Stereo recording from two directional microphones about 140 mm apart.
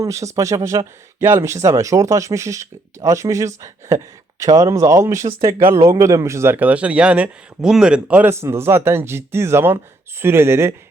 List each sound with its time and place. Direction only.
0.0 s speech: 20° right (ahead or behind)